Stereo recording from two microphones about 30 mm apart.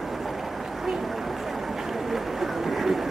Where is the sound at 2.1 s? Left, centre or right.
Centre.